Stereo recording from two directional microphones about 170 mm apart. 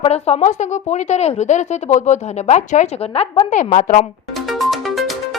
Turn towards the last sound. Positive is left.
turn(degrees=0)  # may be behind; listen again after turning